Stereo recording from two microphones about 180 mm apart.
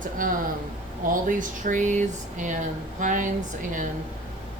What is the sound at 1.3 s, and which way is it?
Speech, 45° right (ahead or behind).